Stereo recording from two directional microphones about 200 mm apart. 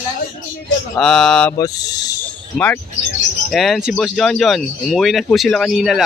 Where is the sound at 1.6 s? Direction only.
20° left (ahead or behind).